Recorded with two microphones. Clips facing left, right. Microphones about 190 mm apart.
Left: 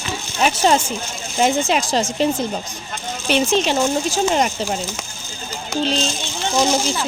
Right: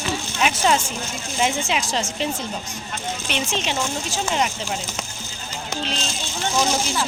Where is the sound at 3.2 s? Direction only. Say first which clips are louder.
Left 10 dB; 40° left (ahead or behind).